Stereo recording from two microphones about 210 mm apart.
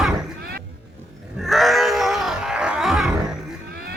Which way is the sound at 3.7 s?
45° right (ahead or behind).